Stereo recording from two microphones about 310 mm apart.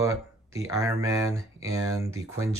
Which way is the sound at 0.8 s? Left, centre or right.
Centre.